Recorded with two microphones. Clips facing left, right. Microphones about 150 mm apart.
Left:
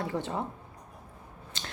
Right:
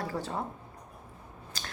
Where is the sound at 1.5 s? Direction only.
25° left (ahead or behind).